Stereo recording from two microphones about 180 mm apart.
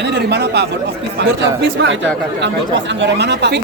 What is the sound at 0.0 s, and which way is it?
Speech, 70° right (ahead or behind).